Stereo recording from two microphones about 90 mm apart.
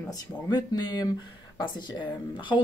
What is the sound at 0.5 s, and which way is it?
Speech, 55° left (ahead or behind).